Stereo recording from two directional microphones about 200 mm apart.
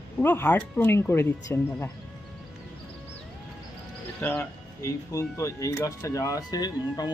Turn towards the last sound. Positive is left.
turn(degrees=20)  # may be behind; listen again after turning